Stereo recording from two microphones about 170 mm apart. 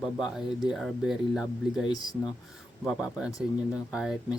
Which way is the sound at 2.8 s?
Centre (ahead or behind).